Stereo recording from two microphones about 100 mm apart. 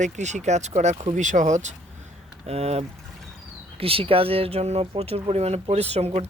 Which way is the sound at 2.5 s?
90° right.